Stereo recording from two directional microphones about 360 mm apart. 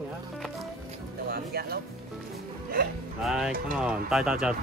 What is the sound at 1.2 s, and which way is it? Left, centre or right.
Speech, right.